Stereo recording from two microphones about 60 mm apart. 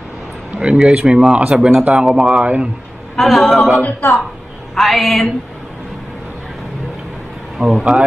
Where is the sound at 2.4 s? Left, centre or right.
Right.